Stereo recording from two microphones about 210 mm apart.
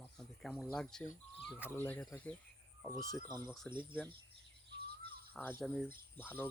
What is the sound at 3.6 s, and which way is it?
Speech, 20° right (ahead or behind).